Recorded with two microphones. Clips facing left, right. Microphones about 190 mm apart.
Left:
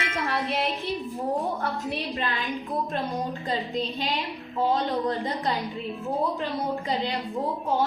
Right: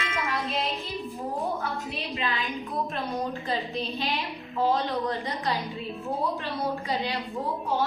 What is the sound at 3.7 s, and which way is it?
Speech, 15° left (ahead or behind).